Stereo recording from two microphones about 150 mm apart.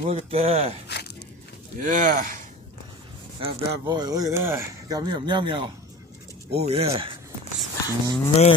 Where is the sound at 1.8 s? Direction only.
60° right (ahead or behind).